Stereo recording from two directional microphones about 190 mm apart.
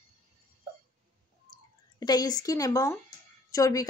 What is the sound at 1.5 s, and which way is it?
Speech, 20° left (ahead or behind).